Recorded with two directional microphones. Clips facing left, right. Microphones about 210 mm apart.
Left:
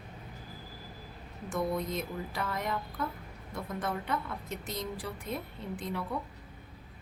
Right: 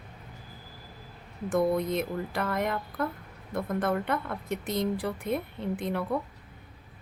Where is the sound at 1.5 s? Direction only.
60° right (ahead or behind).